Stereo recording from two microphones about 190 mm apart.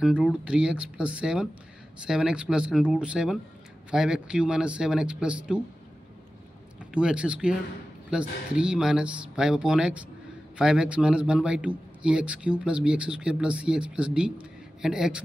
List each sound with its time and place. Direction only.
0.0 s a man's voice: 5° right (ahead or behind)
6.8 s a man's voice: 5° right (ahead or behind)